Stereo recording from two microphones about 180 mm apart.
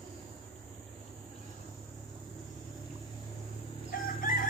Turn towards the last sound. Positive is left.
turn(degrees=50)  # may be behind; listen again after turning